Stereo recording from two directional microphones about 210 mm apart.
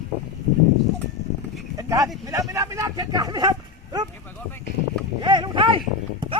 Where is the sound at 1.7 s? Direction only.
15° right (ahead or behind).